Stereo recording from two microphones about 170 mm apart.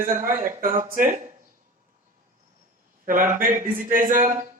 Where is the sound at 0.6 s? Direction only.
55° right (ahead or behind).